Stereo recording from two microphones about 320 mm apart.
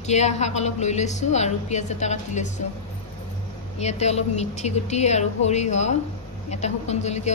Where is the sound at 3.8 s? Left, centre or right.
Centre.